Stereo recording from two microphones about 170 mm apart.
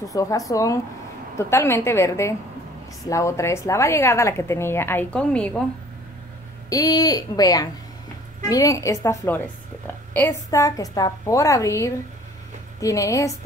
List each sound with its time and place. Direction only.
0.1 s a woman's voice: 20° left (ahead or behind)
6.7 s a woman's voice: 20° left (ahead or behind)